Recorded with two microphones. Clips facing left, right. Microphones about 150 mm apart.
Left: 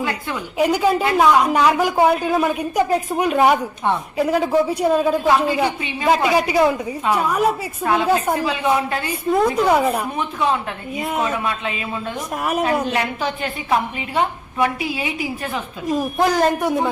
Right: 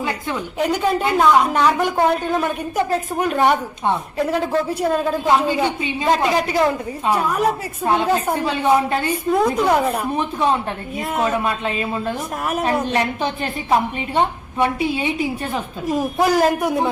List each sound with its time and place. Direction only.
0.6 s a man's voice: 5° left (ahead or behind)
5.2 s a woman's voice: 20° right (ahead or behind)
5.5 s a woman's voice: 10° left (ahead or behind)
8.4 s a man's voice: 30° right (ahead or behind)
9.3 s a man's voice: centre (ahead or behind)
11.3 s a man's voice: 40° right (ahead or behind)
16.1 s a man's voice: 5° right (ahead or behind)